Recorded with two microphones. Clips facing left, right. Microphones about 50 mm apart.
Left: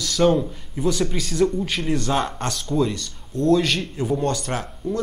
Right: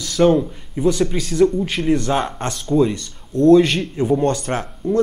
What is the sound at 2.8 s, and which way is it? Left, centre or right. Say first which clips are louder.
Speech: right 3 dB; right.